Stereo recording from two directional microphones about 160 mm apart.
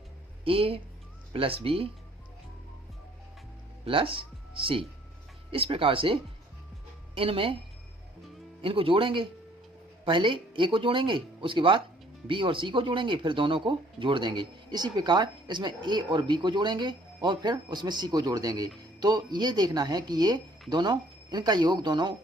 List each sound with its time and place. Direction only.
0.4 s speech: 35° right (ahead or behind)
3.8 s speech: 35° right (ahead or behind)
7.2 s speech: 35° right (ahead or behind)
8.6 s speech: 35° right (ahead or behind)